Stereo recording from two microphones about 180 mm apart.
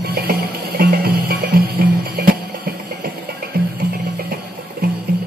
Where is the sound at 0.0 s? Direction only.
60° right (ahead or behind).